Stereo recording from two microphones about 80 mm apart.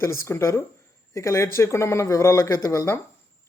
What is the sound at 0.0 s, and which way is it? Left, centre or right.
Speech, left.